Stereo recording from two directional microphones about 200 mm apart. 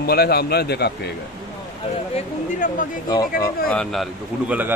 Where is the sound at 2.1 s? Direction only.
40° left (ahead or behind).